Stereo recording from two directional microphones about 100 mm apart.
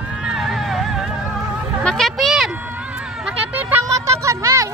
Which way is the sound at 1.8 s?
5° left (ahead or behind).